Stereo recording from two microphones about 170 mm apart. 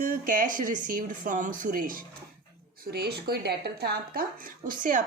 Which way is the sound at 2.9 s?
70° right (ahead or behind).